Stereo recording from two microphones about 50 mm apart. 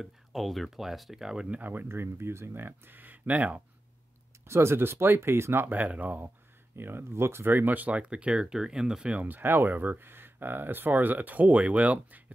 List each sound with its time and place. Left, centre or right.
0.0 s speech: centre
1.6 s speech: right
1.9 s speech: right
4.5 s speech: right
4.7 s speech: right
5.7 s speech: right
6.8 s speech: right
7.5 s speech: right
8.0 s speech: right
9.1 s speech: right